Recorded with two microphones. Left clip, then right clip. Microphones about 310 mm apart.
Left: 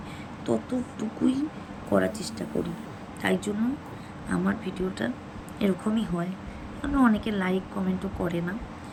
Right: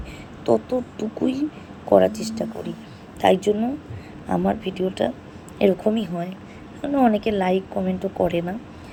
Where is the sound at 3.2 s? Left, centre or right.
Centre.